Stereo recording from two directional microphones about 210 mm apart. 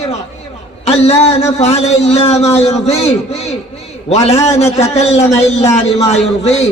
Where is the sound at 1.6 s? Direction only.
30° left (ahead or behind).